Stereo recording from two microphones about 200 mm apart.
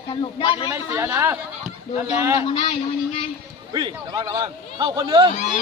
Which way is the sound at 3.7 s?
20° right (ahead or behind).